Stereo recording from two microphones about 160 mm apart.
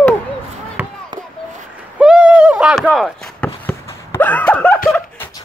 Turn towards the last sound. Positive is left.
turn(degrees=10)  # may be behind; listen again after turning